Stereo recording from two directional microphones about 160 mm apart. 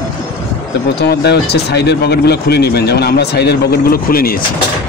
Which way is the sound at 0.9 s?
90° left.